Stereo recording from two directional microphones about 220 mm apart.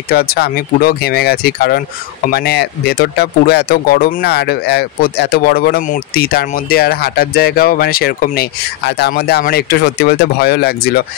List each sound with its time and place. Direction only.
0.1 s speech: 45° left (ahead or behind)